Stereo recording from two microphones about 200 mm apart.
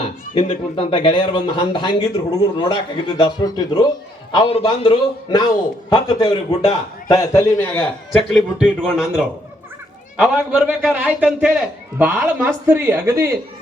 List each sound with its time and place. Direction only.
0.0 s speech: 25° left (ahead or behind)
7.2 s a man's voice: 15° left (ahead or behind)
8.1 s a man's voice: centre (ahead or behind)